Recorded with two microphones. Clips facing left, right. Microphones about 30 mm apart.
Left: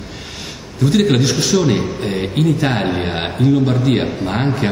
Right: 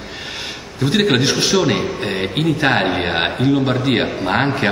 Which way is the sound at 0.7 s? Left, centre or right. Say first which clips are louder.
Left 1 dB; right.